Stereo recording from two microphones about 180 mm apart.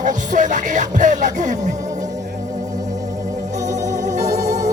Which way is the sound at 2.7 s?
20° right (ahead or behind).